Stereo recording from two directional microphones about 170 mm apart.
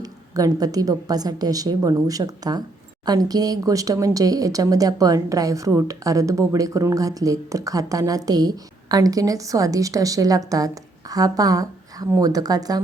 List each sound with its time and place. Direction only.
0.0 s speech: 20° right (ahead or behind)